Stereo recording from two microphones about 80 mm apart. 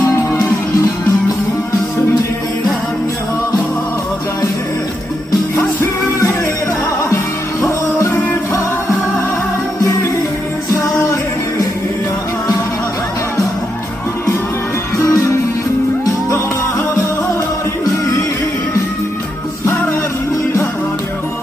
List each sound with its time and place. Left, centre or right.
7.6 s music: left
14.9 s music: left